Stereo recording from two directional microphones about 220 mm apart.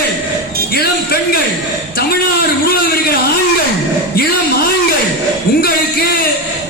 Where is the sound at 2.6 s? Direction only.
45° left (ahead or behind).